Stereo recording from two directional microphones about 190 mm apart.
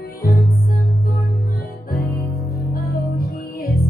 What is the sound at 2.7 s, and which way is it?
Music, 50° left (ahead or behind).